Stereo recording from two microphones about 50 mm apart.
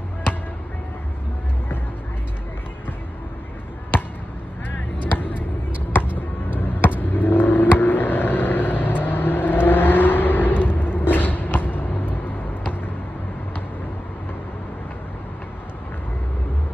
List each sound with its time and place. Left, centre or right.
4.6 s vehicle: left
5.9 s a sound: left
7.0 s vehicle: left